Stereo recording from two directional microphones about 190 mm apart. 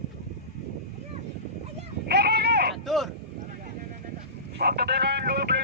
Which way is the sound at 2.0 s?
55° right (ahead or behind).